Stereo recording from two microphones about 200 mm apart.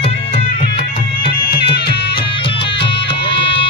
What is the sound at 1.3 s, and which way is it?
Music, 50° left (ahead or behind).